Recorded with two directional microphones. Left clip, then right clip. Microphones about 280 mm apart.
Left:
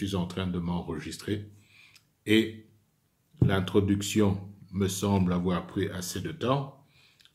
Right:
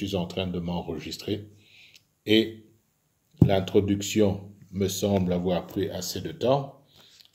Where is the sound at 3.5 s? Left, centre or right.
Centre.